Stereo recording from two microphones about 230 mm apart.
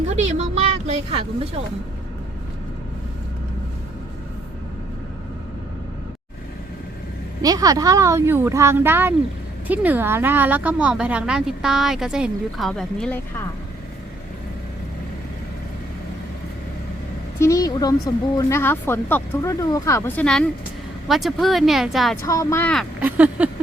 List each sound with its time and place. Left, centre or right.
0.1 s speech: right
7.4 s speech: centre
17.4 s speech: centre
22.3 s speech: centre